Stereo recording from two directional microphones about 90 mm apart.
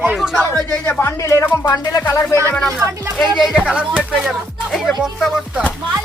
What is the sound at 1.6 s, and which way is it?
Music, 45° left (ahead or behind).